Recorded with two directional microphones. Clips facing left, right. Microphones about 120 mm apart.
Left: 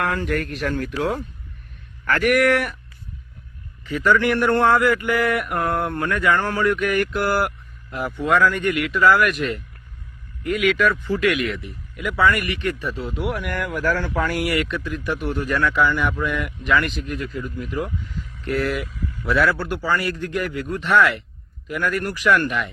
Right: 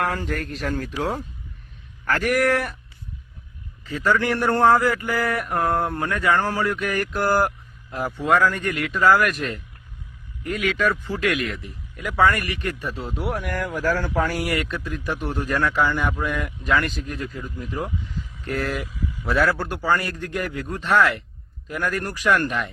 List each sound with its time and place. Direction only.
0.0 s speech: 40° right (ahead or behind)
2.0 s speech: 30° right (ahead or behind)
3.8 s speech: 35° right (ahead or behind)
18.9 s speech: centre (ahead or behind)
19.2 s speech: 40° right (ahead or behind)